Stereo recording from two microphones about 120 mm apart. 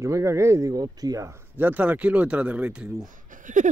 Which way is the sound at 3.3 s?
90° right.